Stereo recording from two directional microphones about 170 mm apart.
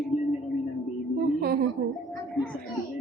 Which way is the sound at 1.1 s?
65° right (ahead or behind).